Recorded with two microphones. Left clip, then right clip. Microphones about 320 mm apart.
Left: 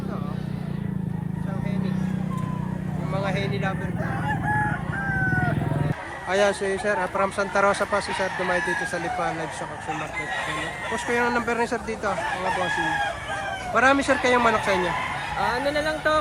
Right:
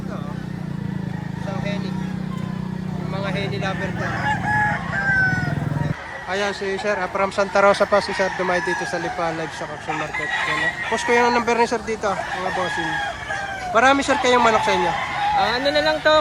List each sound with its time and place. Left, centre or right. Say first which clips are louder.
3.2 s speech: right 3 dB; centre
6.3 s speech: left 2 dB; centre
10.9 s speech: right 6 dB; centre
13.7 s speech: right 3 dB; centre
15.4 s speech: right 3 dB; right